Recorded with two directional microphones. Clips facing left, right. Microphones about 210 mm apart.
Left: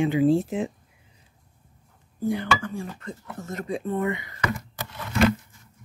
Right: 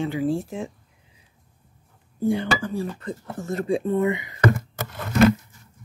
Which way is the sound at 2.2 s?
30° right (ahead or behind).